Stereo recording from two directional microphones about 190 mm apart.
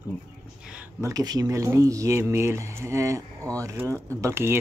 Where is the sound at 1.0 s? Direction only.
20° right (ahead or behind).